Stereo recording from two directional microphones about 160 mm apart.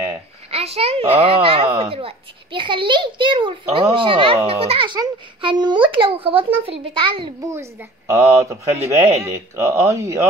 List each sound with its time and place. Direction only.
0.5 s a child's voice: 40° right (ahead or behind)
8.1 s speech: 20° right (ahead or behind)